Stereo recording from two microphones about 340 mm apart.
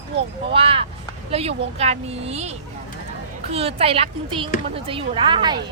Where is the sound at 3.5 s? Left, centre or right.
Centre.